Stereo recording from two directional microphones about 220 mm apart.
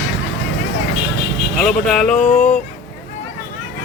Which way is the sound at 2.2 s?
30° left (ahead or behind).